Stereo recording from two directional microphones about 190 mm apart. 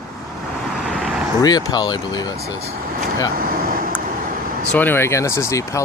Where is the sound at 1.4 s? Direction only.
20° left (ahead or behind).